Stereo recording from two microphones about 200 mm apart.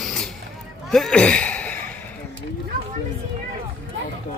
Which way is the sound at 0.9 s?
Centre (ahead or behind).